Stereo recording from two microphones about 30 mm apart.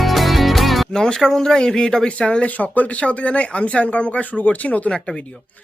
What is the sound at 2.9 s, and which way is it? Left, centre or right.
Speech, left.